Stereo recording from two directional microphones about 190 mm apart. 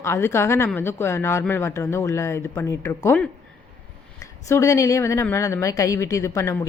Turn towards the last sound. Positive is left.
turn(degrees=15)  # may be behind; listen again after turning